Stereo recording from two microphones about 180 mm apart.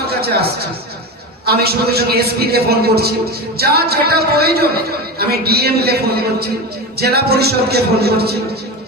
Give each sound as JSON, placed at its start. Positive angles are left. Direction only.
{"t": 0.1, "sound": "a man's voice", "side_deg": -60}